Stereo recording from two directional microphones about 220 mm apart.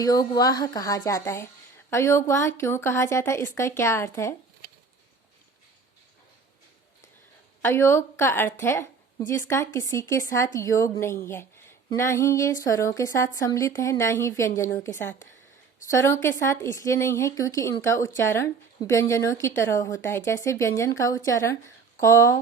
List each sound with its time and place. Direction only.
0.0 s speech: 15° left (ahead or behind)
7.6 s speech: 10° left (ahead or behind)